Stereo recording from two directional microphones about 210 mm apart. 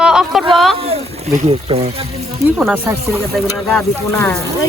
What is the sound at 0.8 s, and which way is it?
Speech, 30° right (ahead or behind).